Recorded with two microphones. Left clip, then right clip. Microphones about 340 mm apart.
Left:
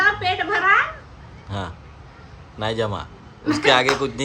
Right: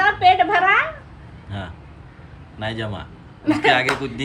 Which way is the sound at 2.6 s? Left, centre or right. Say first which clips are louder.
Left 4 dB; centre.